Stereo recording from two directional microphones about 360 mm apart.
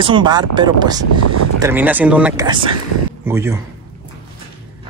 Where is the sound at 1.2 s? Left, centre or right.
Right.